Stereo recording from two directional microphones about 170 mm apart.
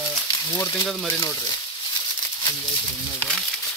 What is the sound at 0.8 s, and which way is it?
Speech, 5° left (ahead or behind).